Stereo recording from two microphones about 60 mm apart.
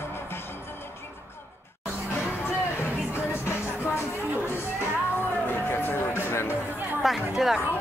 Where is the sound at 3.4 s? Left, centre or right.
Left.